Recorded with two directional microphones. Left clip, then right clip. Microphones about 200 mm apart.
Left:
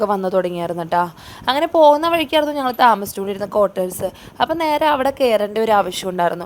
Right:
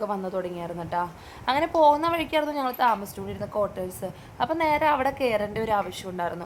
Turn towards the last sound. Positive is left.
turn(degrees=30)  # may be behind; listen again after turning